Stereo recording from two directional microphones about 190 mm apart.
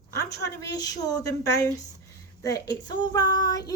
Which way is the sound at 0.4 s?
20° left (ahead or behind).